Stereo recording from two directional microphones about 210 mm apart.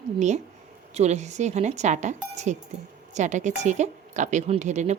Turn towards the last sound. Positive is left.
turn(degrees=-35)  # may be behind; listen again after turning